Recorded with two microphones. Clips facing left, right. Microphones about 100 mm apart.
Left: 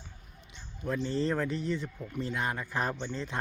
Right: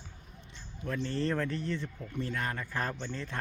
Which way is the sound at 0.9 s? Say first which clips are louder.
Left 2 dB; 15° left (ahead or behind).